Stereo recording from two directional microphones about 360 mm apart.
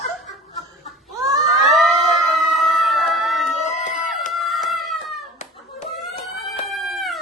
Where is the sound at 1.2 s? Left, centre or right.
Centre.